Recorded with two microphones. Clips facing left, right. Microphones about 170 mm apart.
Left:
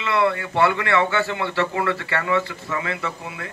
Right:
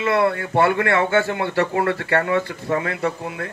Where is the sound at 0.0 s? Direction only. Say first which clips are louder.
Right 2 dB; 50° right (ahead or behind).